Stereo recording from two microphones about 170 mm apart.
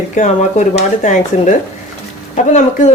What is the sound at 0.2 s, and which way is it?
Speech, 50° left (ahead or behind).